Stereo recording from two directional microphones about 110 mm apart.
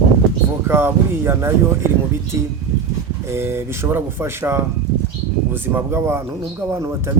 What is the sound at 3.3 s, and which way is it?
A man's voice, 20° right (ahead or behind).